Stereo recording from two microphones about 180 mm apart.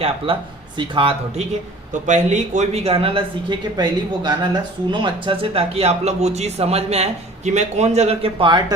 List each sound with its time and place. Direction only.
0.3 s speech: 30° right (ahead or behind)
1.9 s speech: 45° right (ahead or behind); by 8.6 s 25° right (ahead or behind)